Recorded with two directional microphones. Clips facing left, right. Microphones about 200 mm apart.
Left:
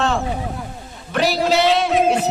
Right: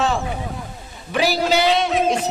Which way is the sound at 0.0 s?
Centre (ahead or behind).